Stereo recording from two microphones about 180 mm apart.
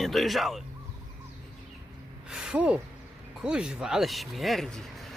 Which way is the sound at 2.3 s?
5° right (ahead or behind).